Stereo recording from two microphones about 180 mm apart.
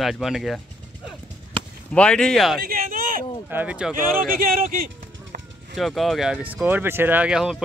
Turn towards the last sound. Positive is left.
turn(degrees=-5)  # may be behind; listen again after turning